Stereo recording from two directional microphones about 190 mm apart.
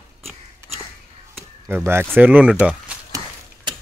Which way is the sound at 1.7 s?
10° right (ahead or behind).